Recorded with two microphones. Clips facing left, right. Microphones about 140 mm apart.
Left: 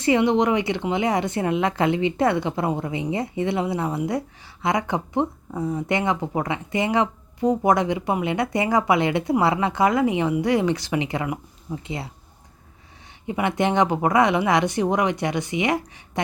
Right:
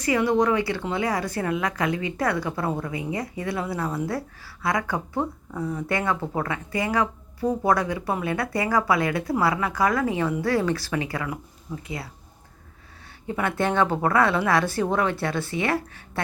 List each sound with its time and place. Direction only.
0.0 s speech: 25° left (ahead or behind)
13.2 s speech: 15° left (ahead or behind)